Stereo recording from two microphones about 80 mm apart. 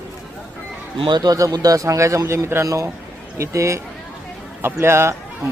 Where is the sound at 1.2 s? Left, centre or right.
Right.